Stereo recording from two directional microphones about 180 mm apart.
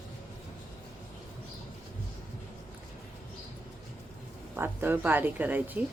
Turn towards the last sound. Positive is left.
turn(degrees=-10)  # may be behind; listen again after turning